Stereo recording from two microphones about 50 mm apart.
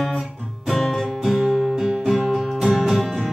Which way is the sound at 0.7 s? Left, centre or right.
Centre.